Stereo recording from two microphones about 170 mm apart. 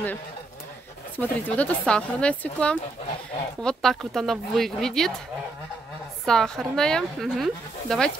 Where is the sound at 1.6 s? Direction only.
5° left (ahead or behind).